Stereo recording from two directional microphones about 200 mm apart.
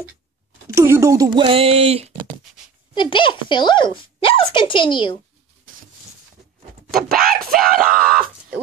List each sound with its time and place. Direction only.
0.7 s speech: 15° right (ahead or behind); by 2.0 s 30° right (ahead or behind)
2.9 s speech: 25° left (ahead or behind)
7.1 s speech: 45° right (ahead or behind)